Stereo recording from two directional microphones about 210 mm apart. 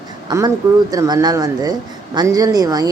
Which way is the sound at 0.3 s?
20° right (ahead or behind).